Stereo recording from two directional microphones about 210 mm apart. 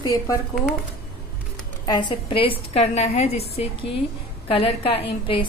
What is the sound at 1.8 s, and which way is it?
A woman's voice, 20° left (ahead or behind).